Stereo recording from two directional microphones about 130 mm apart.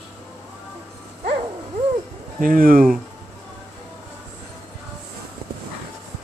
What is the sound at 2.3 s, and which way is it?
Speech, 90° right.